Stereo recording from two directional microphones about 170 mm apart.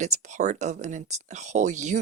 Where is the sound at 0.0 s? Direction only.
45° right (ahead or behind).